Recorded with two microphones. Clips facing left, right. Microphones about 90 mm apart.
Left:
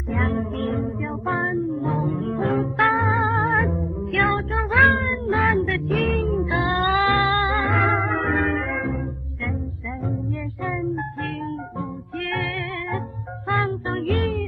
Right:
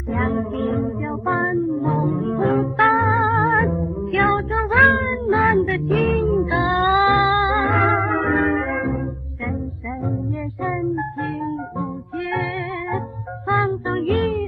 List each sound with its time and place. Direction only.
0.1 s music: centre (ahead or behind)
5.5 s child singing: centre (ahead or behind)
6.9 s music: 20° right (ahead or behind)
7.5 s music: centre (ahead or behind)
10.6 s music: centre (ahead or behind)
13.5 s music: 20° right (ahead or behind)
13.8 s music: centre (ahead or behind)